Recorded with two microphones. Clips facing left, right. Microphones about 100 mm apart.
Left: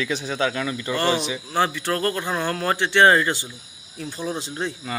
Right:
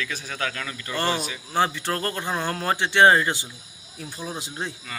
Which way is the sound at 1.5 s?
20° right (ahead or behind).